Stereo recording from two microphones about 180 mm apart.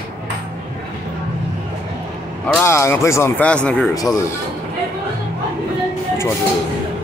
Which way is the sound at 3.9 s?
20° left (ahead or behind).